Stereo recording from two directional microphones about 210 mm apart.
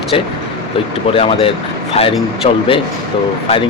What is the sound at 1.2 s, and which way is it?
Speech, 25° left (ahead or behind).